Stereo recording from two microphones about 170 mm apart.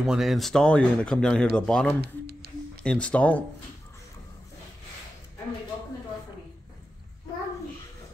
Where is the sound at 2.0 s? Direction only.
70° right (ahead or behind).